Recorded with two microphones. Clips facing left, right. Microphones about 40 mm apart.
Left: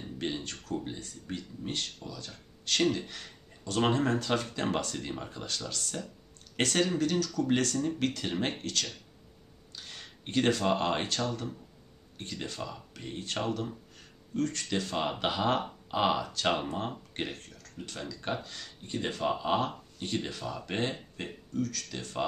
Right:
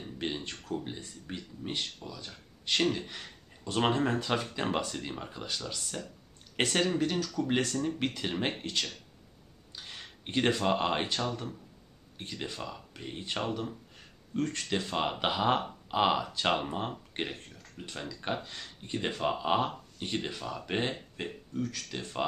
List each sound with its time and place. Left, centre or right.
0.0 s a sound: centre
0.4 s speech: right
1.2 s speech: centre